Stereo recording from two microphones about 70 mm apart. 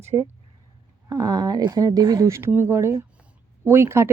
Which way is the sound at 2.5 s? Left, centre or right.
Right.